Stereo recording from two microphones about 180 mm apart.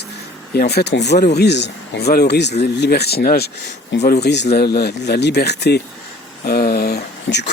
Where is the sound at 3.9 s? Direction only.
90° left.